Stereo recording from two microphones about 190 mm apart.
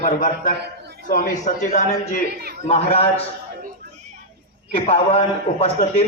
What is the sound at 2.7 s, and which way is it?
Speech, 30° left (ahead or behind).